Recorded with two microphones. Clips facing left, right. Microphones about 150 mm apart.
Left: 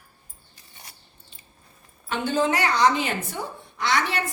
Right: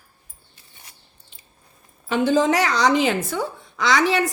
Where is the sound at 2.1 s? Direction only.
90° right.